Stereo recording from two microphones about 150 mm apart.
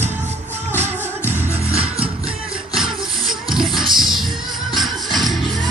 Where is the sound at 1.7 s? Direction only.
40° right (ahead or behind).